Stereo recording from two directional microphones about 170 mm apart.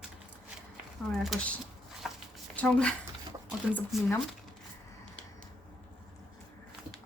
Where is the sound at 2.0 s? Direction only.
Centre (ahead or behind).